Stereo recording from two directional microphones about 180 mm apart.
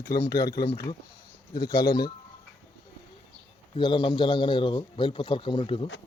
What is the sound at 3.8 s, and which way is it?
A man's voice, 25° left (ahead or behind).